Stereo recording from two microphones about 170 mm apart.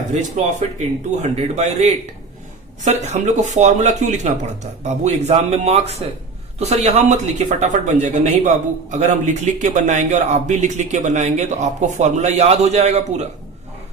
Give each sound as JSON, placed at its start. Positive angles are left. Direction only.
{"t": 0.1, "sound": "a man's voice", "side_deg": -45}